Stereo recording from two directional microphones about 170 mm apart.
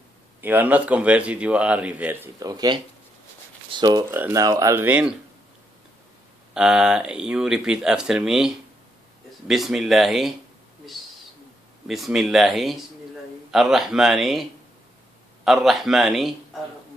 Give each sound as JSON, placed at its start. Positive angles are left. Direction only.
{"t": 0.4, "sound": "speech", "side_deg": -10}
{"t": 2.4, "sound": "speech", "side_deg": -25}
{"t": 6.5, "sound": "speech", "side_deg": -5}
{"t": 11.9, "sound": "speech", "side_deg": 0}
{"t": 15.4, "sound": "speech", "side_deg": 0}